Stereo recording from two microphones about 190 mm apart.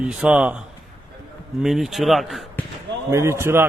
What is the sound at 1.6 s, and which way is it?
Speech, centre (ahead or behind).